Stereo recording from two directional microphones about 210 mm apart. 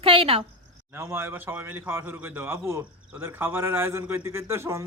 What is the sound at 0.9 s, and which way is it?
A man's voice, 10° right (ahead or behind).